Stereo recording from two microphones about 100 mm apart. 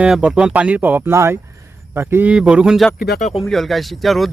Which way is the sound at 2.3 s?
10° right (ahead or behind).